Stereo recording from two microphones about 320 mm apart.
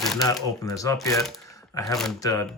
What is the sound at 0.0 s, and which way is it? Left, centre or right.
Shuffling cards, centre.